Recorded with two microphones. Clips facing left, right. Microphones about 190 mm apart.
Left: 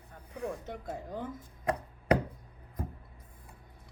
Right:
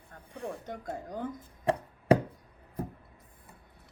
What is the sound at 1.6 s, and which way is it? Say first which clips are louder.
Chopping: right 4 dB; 25° right (ahead or behind).